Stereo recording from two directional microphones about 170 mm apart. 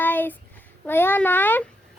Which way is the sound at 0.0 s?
10° left (ahead or behind).